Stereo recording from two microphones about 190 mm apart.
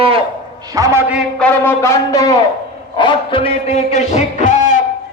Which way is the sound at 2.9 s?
25° left (ahead or behind).